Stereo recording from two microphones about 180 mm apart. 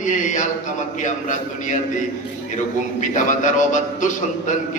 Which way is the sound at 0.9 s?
45° left (ahead or behind).